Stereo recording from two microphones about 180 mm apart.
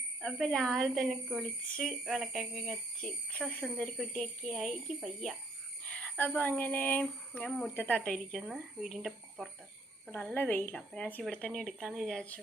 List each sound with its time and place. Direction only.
0.2 s a woman's voice: 5° left (ahead or behind)
5.8 s cricket: 5° left (ahead or behind)
6.6 s a woman's voice: 10° left (ahead or behind)